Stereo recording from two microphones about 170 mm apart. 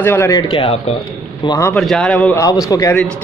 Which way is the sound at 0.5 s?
35° left (ahead or behind).